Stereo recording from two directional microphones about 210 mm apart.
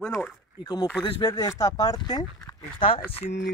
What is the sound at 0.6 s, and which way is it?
Speech, 20° left (ahead or behind).